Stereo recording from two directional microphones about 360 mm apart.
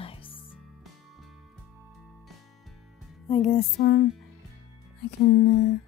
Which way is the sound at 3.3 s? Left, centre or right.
Centre.